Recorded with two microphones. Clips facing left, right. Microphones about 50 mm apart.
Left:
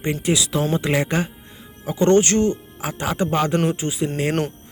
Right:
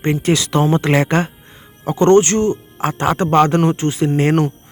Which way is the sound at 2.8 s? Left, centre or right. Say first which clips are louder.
Right 8 dB; right.